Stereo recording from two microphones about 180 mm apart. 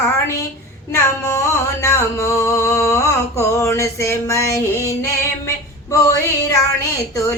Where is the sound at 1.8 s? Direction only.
15° left (ahead or behind).